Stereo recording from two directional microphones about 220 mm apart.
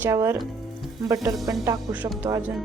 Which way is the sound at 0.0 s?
10° right (ahead or behind).